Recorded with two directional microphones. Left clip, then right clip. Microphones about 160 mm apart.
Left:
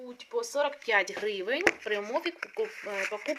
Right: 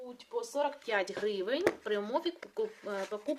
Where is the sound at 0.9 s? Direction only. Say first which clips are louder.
Left 5 dB; 25° right (ahead or behind).